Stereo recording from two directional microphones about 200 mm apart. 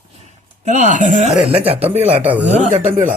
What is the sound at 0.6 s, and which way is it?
Speech, 40° right (ahead or behind).